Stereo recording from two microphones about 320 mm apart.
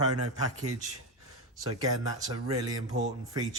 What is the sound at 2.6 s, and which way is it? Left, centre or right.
Speech, centre.